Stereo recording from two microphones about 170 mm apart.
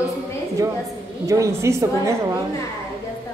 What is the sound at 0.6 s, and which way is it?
Speech, 20° right (ahead or behind).